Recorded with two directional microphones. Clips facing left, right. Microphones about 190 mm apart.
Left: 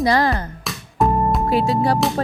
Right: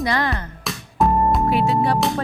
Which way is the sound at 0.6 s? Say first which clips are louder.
Right 1 dB; centre (ahead or behind).